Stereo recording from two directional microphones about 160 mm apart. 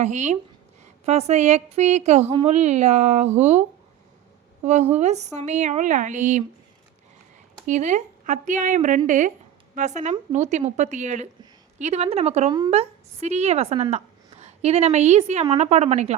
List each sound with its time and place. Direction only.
0.0 s speech: 45° right (ahead or behind)
4.6 s speech: 45° right (ahead or behind)
7.7 s a woman's voice: 45° right (ahead or behind)
12.5 s a woman's voice: 25° right (ahead or behind)
12.7 s a woman's voice: 40° right (ahead or behind)